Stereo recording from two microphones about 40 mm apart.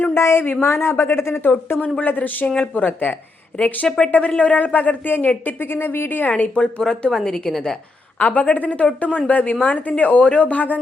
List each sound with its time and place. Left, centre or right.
0.1 s a sound: left
0.6 s speech: left
1.5 s speech: left
2.0 s speech: left
5.5 s a woman's voice: left
6.3 s speech: left
7.1 s a woman's voice: centre
8.2 s speech: left